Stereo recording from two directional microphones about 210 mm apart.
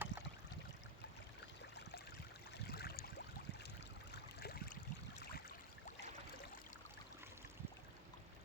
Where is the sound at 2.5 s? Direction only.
50° left (ahead or behind).